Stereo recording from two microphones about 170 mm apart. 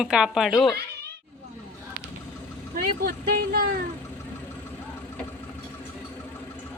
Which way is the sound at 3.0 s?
65° right (ahead or behind).